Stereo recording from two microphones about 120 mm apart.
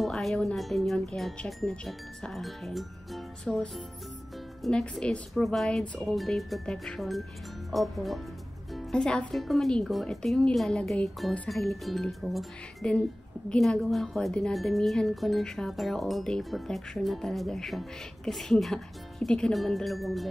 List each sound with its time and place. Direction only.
0.0 s speech: centre (ahead or behind)